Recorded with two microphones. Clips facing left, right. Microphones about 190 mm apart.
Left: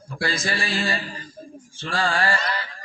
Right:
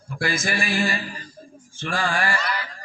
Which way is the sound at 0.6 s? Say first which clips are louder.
Right 2 dB; 25° left (ahead or behind).